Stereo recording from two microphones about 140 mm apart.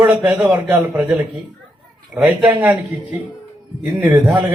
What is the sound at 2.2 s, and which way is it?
Speech, 10° right (ahead or behind).